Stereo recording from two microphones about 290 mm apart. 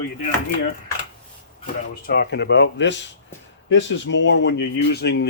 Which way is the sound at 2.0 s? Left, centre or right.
Left.